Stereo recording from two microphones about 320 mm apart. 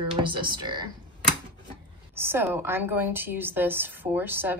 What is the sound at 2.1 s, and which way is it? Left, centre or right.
A woman's voice, centre.